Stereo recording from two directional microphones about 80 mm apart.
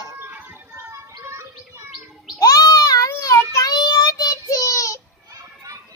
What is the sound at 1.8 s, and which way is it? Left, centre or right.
Chirp, centre.